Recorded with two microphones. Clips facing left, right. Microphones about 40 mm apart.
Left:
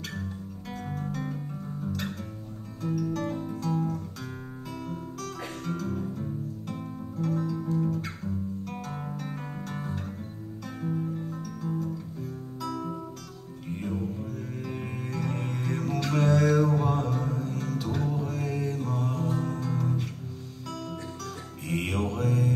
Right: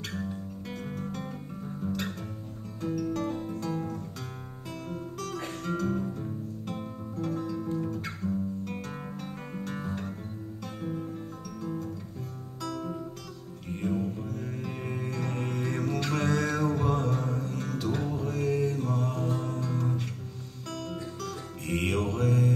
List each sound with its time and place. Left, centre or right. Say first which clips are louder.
0.8 s music: left 4 dB; centre
4.7 s guitar: right 1 dB; centre
5.3 s music: right 2 dB; centre
13.7 s music: right 2 dB; centre
21.3 s music: even; centre